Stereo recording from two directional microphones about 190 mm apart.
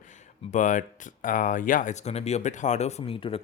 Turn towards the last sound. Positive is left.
turn(degrees=30)  # may be behind; listen again after turning